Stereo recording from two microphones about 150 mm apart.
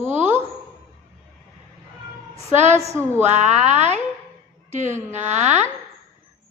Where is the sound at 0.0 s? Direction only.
50° right (ahead or behind).